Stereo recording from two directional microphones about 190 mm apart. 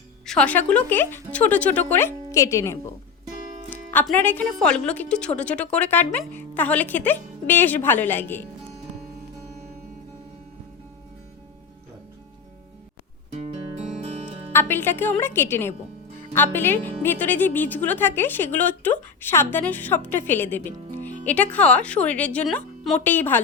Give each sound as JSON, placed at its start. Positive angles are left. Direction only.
{"t": 0.3, "sound": "a woman's voice", "side_deg": 5}
{"t": 14.0, "sound": "music", "side_deg": -35}
{"t": 14.5, "sound": "a woman's voice", "side_deg": 10}